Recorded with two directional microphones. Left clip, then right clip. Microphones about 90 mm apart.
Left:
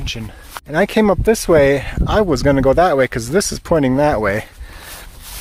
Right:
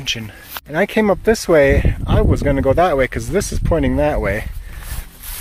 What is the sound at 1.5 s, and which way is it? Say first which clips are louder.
Speech: even; 50° left (ahead or behind).